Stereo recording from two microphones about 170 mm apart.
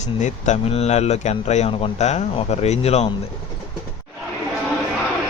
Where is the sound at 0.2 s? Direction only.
45° left (ahead or behind).